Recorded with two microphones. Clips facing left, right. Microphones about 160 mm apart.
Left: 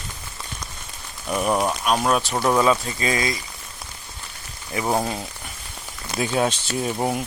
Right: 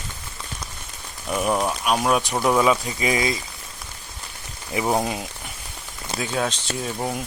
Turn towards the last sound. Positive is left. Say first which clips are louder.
# left 3 dB
turn(degrees=15)  # may be behind; listen again after turning